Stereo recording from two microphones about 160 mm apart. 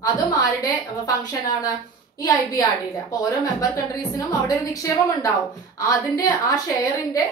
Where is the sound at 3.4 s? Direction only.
20° left (ahead or behind).